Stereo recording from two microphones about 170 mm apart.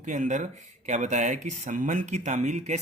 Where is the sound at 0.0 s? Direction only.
45° right (ahead or behind).